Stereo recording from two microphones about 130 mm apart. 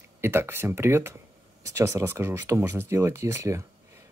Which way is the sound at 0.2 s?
20° right (ahead or behind).